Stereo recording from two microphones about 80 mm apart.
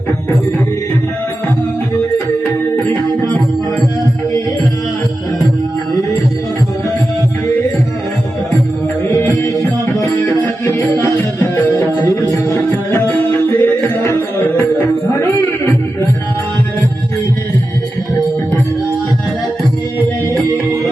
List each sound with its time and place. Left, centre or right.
9.2 s music: left
9.8 s music: left
10.4 s music: left
11.0 s music: left